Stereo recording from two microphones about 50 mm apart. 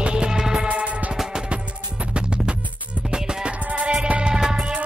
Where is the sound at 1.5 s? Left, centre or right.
Right.